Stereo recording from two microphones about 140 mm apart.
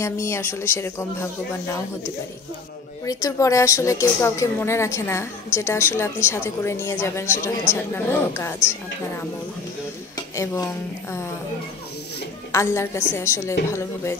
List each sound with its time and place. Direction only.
0.0 s speech: 20° left (ahead or behind)
3.1 s speech: 25° left (ahead or behind)
10.3 s speech: 20° left (ahead or behind)
12.5 s speech: 20° left (ahead or behind)